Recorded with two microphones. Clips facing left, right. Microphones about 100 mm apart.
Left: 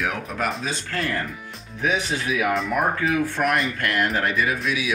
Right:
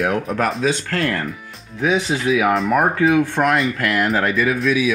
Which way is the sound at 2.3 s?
90° right.